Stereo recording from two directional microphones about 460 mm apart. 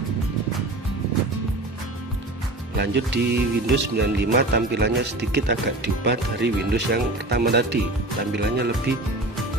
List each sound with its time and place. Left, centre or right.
2.7 s speech: right